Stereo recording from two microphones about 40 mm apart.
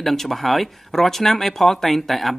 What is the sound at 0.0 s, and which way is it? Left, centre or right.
Speech, centre.